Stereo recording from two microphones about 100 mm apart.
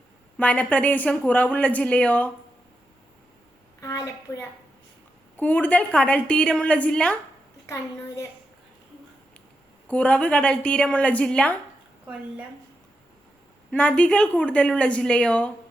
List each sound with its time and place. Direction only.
0.3 s a woman's voice: 15° left (ahead or behind)
3.8 s a sound: 35° left (ahead or behind)
5.4 s a woman's voice: 15° left (ahead or behind)
7.7 s a woman's voice: 30° left (ahead or behind)
9.9 s a woman's voice: 15° left (ahead or behind)
13.7 s a woman's voice: 10° left (ahead or behind)